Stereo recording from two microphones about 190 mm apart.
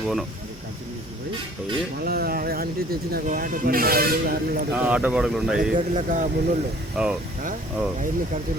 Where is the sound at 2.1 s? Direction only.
50° right (ahead or behind).